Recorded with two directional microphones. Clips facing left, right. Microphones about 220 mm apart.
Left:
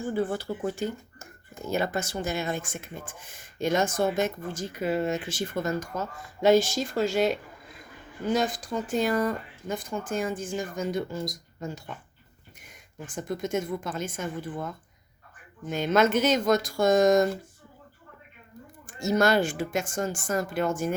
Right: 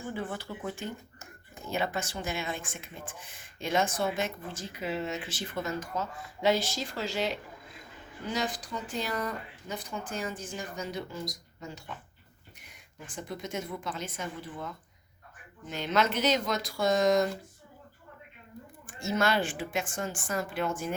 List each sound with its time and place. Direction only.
0.1 s speech: 40° left (ahead or behind)
18.9 s speech: 40° left (ahead or behind)